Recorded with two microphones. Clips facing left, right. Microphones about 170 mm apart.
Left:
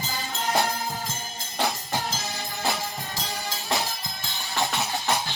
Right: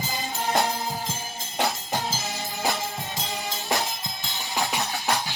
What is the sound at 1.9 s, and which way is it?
Music, 10° right (ahead or behind).